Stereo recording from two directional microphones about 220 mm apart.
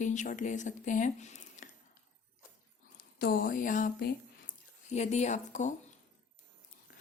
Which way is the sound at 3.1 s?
40° left (ahead or behind).